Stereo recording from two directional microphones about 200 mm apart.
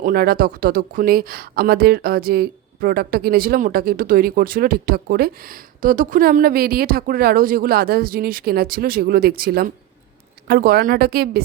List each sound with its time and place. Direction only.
0.0 s speech: 50° right (ahead or behind)